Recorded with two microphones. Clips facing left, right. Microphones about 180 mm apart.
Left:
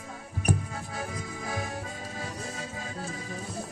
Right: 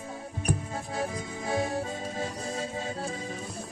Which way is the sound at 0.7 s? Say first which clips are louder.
Right 4 dB; 30° right (ahead or behind).